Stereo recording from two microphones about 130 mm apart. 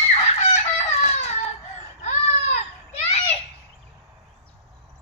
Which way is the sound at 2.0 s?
60° left (ahead or behind).